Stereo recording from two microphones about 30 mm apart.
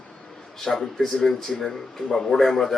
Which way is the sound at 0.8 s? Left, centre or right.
Centre.